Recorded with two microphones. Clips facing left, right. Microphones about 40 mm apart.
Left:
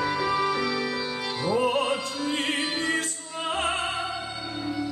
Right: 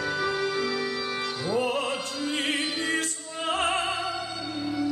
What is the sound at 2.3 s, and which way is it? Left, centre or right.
Music, left.